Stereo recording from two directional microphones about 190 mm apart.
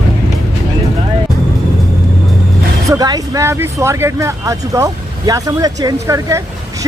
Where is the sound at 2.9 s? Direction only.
20° right (ahead or behind).